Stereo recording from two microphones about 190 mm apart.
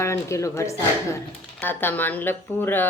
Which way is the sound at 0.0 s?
15° left (ahead or behind).